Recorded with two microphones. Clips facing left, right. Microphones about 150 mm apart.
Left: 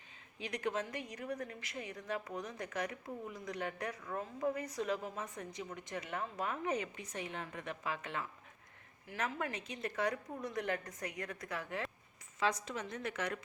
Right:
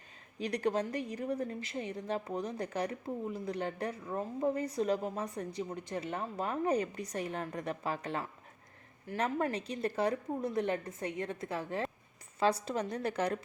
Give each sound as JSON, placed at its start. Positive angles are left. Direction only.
{"t": 0.3, "sound": "a woman's voice", "side_deg": -35}